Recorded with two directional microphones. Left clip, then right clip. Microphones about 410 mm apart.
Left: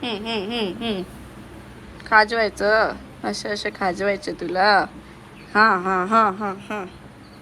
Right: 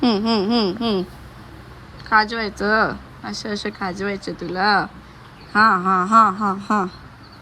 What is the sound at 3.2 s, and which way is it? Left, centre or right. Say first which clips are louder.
Speech: left 3 dB; centre.